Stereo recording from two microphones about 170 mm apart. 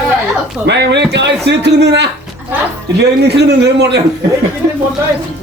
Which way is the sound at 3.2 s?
75° right (ahead or behind).